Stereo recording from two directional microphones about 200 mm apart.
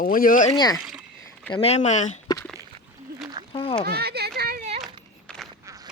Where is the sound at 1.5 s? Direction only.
30° left (ahead or behind).